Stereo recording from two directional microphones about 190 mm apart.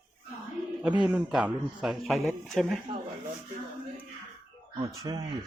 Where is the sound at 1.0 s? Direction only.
5° right (ahead or behind).